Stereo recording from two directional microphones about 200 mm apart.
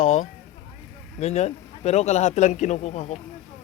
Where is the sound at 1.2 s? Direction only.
35° left (ahead or behind).